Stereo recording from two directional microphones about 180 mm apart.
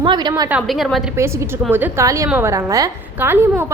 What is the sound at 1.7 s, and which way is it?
A woman's voice, 15° right (ahead or behind).